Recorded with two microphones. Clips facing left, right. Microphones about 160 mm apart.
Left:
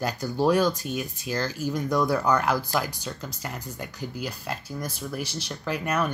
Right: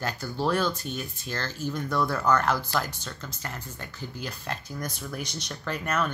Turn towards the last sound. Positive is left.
turn(degrees=10)  # may be behind; listen again after turning